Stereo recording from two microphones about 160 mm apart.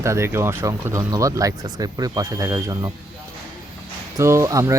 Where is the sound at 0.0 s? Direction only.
15° right (ahead or behind).